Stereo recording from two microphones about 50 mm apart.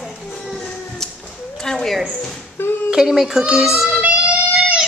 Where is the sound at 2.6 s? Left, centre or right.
Left.